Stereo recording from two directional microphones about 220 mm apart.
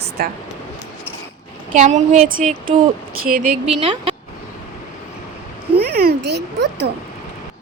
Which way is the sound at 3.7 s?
25° right (ahead or behind).